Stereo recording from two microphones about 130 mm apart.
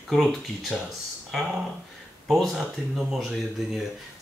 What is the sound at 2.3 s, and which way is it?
Speech, centre (ahead or behind).